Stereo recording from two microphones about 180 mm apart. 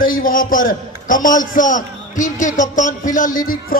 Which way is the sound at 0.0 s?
50° left (ahead or behind).